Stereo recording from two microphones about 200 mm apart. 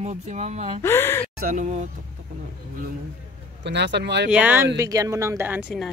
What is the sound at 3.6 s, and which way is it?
Speech, 60° right (ahead or behind).